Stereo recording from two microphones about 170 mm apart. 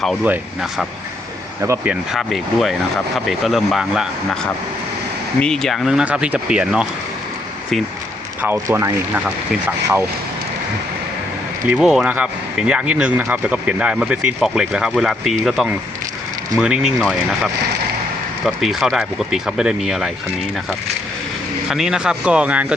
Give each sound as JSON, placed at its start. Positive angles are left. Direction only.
{"t": 0.3, "sound": "speech", "side_deg": 0}
{"t": 1.6, "sound": "speech", "side_deg": -15}
{"t": 1.9, "sound": "speech", "side_deg": 0}
{"t": 5.4, "sound": "speech", "side_deg": 0}
{"t": 8.4, "sound": "speech", "side_deg": -10}
{"t": 11.7, "sound": "speech", "side_deg": -5}
{"t": 21.7, "sound": "speech", "side_deg": -5}